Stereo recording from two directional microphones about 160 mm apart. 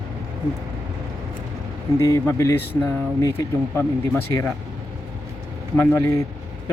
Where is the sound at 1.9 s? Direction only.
20° left (ahead or behind).